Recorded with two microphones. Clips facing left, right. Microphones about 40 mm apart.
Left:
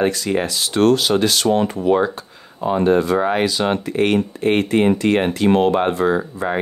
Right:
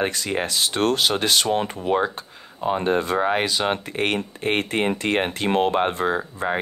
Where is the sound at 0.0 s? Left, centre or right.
Right.